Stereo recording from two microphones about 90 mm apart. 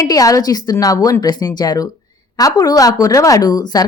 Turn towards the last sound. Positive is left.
turn(degrees=45)  # may be behind; listen again after turning